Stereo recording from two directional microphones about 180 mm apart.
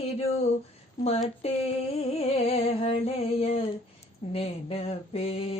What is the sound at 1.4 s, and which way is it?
Mantra, 35° left (ahead or behind).